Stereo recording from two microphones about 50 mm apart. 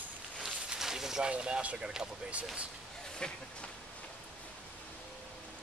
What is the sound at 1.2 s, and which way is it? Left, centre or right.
Speech, centre.